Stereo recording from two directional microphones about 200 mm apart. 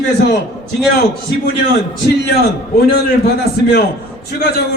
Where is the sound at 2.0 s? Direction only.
55° left (ahead or behind).